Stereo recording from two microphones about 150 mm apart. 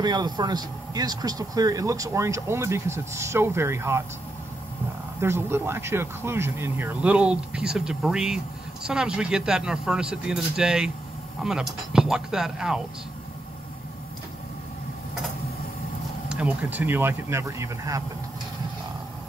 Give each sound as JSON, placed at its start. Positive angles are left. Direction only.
{"t": 0.0, "sound": "speech", "side_deg": -30}
{"t": 5.2, "sound": "speech", "side_deg": -15}
{"t": 11.9, "sound": "speech", "side_deg": -5}
{"t": 16.3, "sound": "speech", "side_deg": -5}